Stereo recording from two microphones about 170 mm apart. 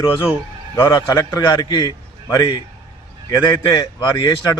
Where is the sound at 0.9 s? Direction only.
25° left (ahead or behind).